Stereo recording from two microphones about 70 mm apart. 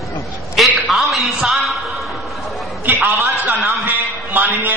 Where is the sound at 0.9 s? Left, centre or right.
Centre.